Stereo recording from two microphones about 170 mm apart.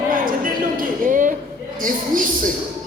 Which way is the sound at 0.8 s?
50° right (ahead or behind).